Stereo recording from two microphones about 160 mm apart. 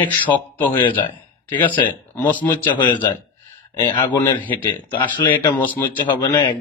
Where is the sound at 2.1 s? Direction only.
10° left (ahead or behind).